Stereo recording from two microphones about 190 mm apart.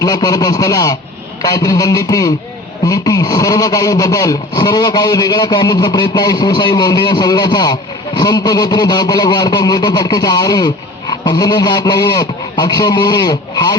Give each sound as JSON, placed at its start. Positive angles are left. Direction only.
{"t": 0.0, "sound": "a man's voice", "side_deg": 20}